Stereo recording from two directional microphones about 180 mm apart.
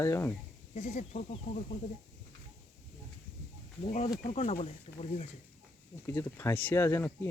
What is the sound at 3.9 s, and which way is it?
Speech, 40° left (ahead or behind).